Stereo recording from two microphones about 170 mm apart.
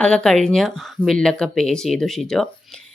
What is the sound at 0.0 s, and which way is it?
Speech, 5° left (ahead or behind).